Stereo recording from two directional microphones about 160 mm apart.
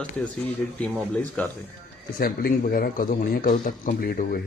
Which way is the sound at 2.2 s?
65° left (ahead or behind).